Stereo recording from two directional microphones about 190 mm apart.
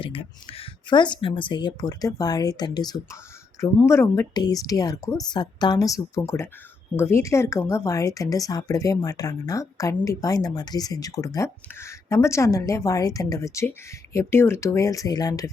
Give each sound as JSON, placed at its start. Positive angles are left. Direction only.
{"t": 0.0, "sound": "speech", "side_deg": 30}